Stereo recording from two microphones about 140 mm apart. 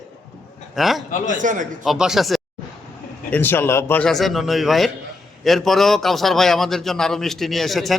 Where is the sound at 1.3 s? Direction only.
65° right (ahead or behind).